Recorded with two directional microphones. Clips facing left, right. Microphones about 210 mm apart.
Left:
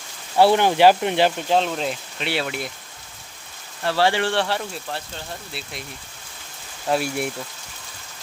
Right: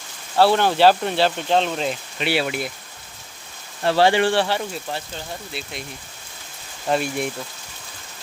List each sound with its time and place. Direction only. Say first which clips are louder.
0.3 s speech: left 1 dB; 15° left (ahead or behind)
1.5 s speech: right 1 dB; 5° left (ahead or behind)
3.8 s speech: right 4 dB; 20° right (ahead or behind)
4.4 s speech: right 2 dB; centre (ahead or behind)
6.8 s speech: even; 5° left (ahead or behind)